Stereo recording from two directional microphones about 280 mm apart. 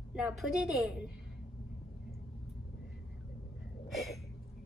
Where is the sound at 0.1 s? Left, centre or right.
Centre.